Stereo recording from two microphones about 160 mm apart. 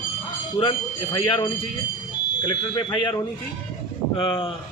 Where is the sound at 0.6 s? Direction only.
30° left (ahead or behind).